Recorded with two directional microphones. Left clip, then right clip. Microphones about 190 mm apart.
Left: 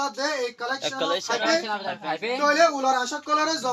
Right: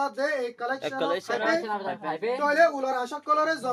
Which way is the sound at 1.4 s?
40° right (ahead or behind).